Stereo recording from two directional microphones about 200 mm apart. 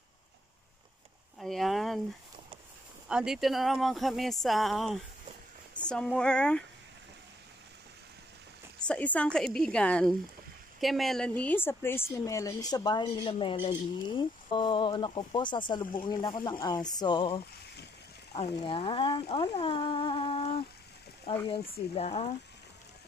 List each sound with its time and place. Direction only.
1.4 s speech: centre (ahead or behind)
3.1 s speech: 5° right (ahead or behind)
8.7 s a woman's voice: 5° left (ahead or behind); by 22.3 s 30° left (ahead or behind)